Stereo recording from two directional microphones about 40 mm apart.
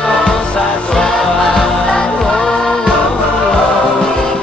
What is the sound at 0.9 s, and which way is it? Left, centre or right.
Music, centre.